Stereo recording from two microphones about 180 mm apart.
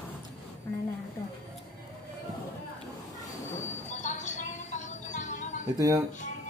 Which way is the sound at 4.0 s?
40° left (ahead or behind).